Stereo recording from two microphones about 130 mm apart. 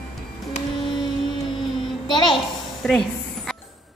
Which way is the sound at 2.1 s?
35° left (ahead or behind).